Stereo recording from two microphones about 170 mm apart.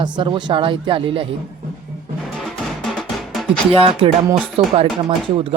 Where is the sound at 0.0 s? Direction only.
30° right (ahead or behind).